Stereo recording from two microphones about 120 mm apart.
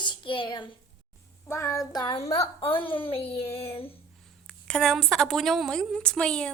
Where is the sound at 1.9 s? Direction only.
35° left (ahead or behind).